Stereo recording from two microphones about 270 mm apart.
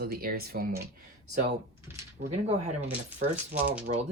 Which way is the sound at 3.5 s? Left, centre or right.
Centre.